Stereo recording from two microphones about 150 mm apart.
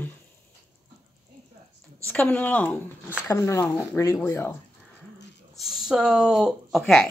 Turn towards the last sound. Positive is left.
turn(degrees=5)  # may be behind; listen again after turning